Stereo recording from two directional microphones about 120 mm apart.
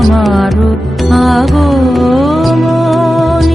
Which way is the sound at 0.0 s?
Centre (ahead or behind).